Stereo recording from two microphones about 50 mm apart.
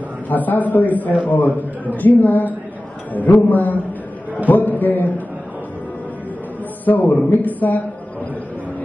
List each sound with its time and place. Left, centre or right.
0.3 s a man's voice: left
6.8 s a man's voice: left